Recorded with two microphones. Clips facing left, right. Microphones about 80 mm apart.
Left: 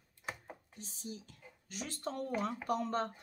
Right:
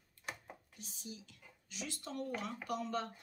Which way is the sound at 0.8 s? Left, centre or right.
Left.